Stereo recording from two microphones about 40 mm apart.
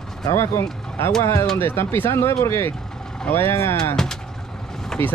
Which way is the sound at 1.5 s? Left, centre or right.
Left.